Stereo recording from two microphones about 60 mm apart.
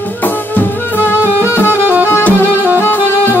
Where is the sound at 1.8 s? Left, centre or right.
Right.